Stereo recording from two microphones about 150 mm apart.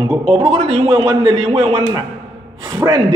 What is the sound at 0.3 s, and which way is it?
Speech, 40° right (ahead or behind).